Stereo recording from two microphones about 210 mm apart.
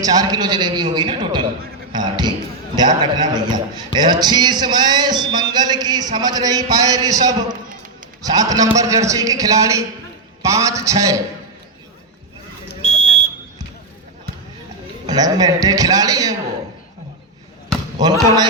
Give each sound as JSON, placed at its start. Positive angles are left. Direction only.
{"t": 0.0, "sound": "a man's voice", "side_deg": -20}
{"t": 12.8, "sound": "smoke detector", "side_deg": 35}
{"t": 15.0, "sound": "a man's voice", "side_deg": -20}